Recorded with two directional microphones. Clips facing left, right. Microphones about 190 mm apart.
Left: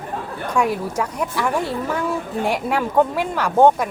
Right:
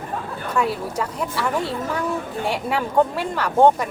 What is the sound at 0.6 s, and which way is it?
Speech, 10° left (ahead or behind).